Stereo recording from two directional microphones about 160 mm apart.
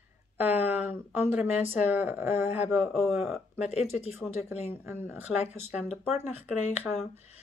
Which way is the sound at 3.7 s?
40° left (ahead or behind).